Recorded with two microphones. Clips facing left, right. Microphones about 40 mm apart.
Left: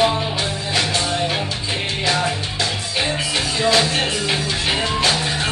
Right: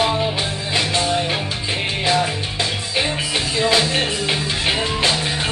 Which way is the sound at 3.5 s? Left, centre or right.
Centre.